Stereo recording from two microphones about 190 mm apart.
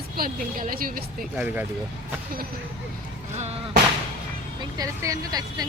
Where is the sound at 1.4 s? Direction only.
10° right (ahead or behind).